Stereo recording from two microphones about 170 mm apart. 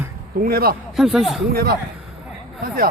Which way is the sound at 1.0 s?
Centre (ahead or behind).